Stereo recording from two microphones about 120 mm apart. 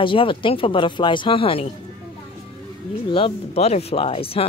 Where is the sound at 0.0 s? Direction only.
45° left (ahead or behind).